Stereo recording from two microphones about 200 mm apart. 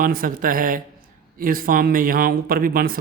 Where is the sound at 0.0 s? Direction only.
45° right (ahead or behind).